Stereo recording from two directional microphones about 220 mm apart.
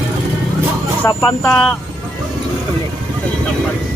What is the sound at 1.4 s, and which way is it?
Speech, 5° left (ahead or behind).